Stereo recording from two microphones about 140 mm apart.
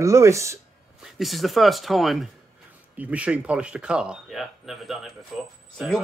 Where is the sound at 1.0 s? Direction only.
Centre (ahead or behind).